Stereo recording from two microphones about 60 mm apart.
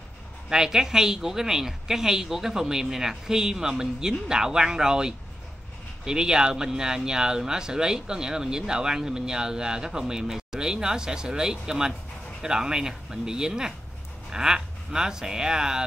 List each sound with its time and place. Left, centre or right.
0.5 s speech: centre